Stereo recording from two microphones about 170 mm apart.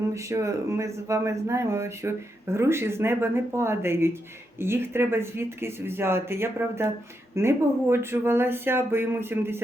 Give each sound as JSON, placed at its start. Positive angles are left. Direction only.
{"t": 0.1, "sound": "speech", "side_deg": -15}